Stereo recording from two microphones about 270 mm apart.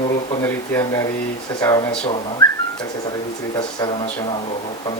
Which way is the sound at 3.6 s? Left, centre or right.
Centre.